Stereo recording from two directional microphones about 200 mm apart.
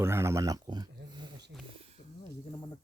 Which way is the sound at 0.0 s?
15° right (ahead or behind).